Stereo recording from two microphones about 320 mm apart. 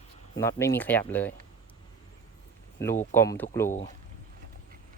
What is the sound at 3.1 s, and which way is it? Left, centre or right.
Speech, centre.